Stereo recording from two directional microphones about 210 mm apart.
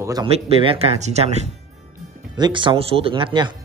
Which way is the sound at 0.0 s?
15° right (ahead or behind).